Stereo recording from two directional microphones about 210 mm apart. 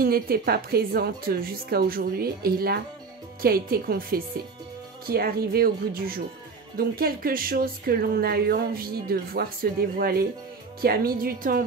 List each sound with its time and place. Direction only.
0.0 s speech: 45° right (ahead or behind)